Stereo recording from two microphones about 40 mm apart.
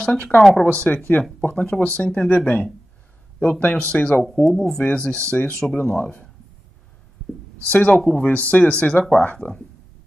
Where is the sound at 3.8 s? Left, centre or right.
Left.